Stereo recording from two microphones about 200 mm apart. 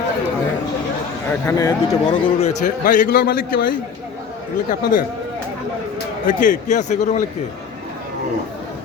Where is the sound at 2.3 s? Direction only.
35° left (ahead or behind).